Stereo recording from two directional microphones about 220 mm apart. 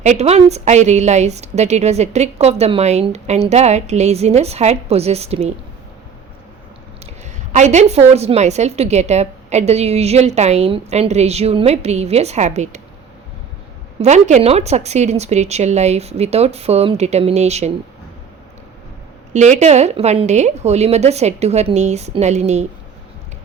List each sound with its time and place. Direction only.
0.0 s a woman's voice: 30° right (ahead or behind)
7.5 s a woman's voice: 30° right (ahead or behind)
14.0 s a woman's voice: 30° right (ahead or behind)
19.3 s a woman's voice: 35° right (ahead or behind)